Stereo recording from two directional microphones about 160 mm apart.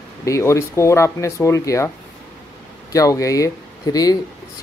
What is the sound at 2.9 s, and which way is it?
Speech, 20° left (ahead or behind).